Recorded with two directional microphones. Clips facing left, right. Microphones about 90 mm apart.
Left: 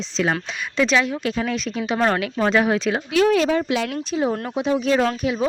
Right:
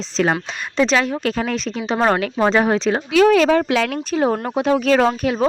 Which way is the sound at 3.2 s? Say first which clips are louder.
Right 5 dB; 90° right.